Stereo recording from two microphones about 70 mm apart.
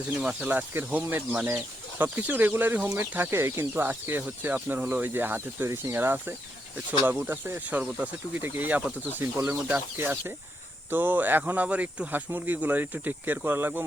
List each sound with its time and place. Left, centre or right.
0.1 s speech: centre
7.7 s speech: centre
8.4 s speech: right